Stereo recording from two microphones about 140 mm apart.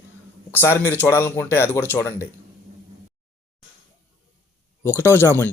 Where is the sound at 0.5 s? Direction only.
15° left (ahead or behind).